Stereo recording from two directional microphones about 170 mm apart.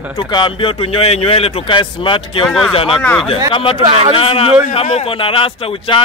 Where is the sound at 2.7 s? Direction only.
30° left (ahead or behind).